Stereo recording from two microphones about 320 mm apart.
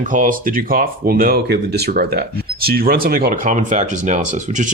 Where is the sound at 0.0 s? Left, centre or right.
Right.